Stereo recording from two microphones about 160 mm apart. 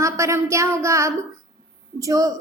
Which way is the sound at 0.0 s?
20° right (ahead or behind).